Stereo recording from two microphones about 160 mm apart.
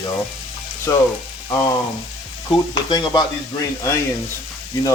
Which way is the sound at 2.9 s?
25° left (ahead or behind).